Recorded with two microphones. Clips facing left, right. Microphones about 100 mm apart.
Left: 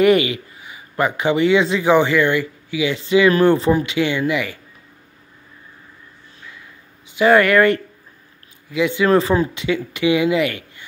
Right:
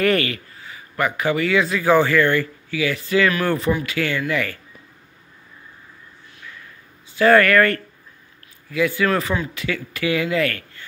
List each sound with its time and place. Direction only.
0.0 s a man's voice: 15° left (ahead or behind)
3.4 s a man's voice: 30° left (ahead or behind)
7.1 s a man's voice: 15° left (ahead or behind)